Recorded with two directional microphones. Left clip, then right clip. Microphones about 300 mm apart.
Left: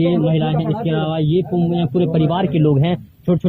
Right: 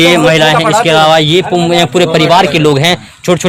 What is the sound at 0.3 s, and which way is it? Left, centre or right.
A man's voice, right.